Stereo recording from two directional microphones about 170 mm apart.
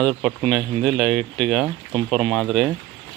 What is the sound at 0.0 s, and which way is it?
Speech, centre (ahead or behind).